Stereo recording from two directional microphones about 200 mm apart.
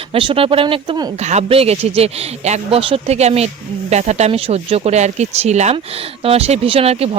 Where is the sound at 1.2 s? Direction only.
35° right (ahead or behind).